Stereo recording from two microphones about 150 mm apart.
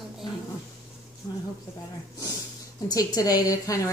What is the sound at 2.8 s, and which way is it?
Speech, 25° left (ahead or behind).